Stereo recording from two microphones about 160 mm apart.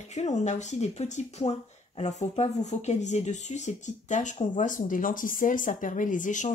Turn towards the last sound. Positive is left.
turn(degrees=50)  # may be behind; listen again after turning